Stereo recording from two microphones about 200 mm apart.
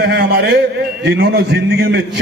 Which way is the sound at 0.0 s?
55° right (ahead or behind).